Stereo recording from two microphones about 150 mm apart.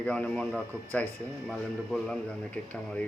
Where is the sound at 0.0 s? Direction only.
10° left (ahead or behind).